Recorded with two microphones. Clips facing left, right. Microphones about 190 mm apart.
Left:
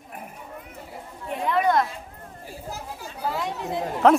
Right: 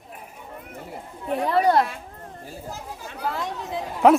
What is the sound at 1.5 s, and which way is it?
Speech, 35° right (ahead or behind).